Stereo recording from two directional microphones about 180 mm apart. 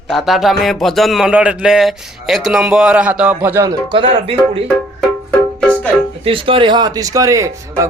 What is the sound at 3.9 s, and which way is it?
Speech, 30° right (ahead or behind).